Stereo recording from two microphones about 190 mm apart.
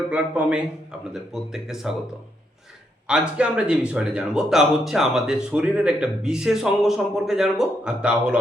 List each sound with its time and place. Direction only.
0.1 s a man's voice: 5° right (ahead or behind)
3.1 s speech: 5° right (ahead or behind)